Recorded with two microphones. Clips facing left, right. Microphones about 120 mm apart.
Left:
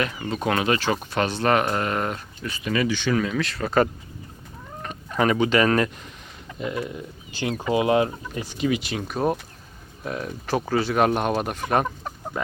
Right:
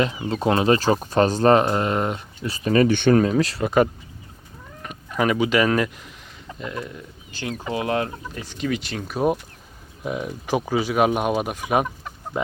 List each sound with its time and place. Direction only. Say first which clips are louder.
0.3 s speech: right 4 dB; 30° right (ahead or behind)
2.5 s speech: right 6 dB; 40° right (ahead or behind)
3.6 s speech: right 1 dB; 15° right (ahead or behind)
4.8 s fowl: even; 5° right (ahead or behind)
6.6 s speech: left 3 dB; 10° left (ahead or behind)
9.1 s speech: right 3 dB; 10° right (ahead or behind)